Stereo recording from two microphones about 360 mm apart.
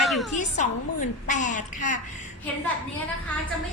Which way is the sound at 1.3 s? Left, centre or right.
Left.